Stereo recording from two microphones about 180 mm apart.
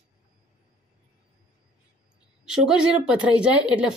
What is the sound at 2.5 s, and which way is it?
A woman's voice, 5° right (ahead or behind).